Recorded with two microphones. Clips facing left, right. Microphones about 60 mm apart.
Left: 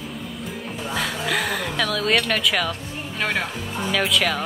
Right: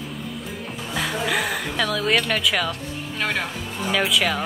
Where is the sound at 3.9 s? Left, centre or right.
Centre.